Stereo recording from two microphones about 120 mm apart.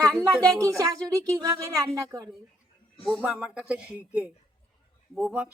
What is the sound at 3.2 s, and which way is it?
A man's voice, 10° right (ahead or behind).